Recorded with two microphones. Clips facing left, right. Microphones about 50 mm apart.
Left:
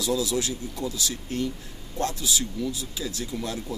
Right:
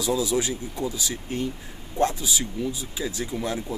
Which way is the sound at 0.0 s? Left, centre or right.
Right.